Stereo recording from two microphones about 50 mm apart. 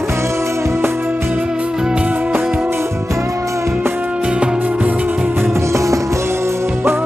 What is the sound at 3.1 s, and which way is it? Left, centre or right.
Music, right.